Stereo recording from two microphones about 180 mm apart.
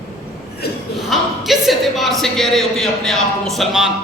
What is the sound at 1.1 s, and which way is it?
A man's voice, centre (ahead or behind).